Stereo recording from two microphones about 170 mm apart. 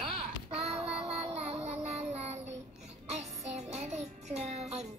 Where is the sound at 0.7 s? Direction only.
35° right (ahead or behind).